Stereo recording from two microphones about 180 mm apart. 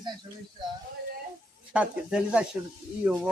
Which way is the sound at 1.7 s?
5° right (ahead or behind).